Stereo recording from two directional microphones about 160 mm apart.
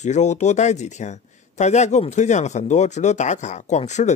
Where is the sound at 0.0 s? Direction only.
45° left (ahead or behind).